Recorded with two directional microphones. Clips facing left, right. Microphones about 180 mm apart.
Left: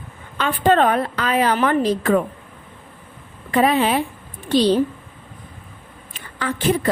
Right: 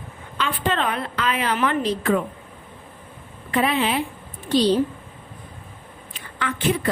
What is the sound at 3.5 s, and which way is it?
Speech, 40° left (ahead or behind).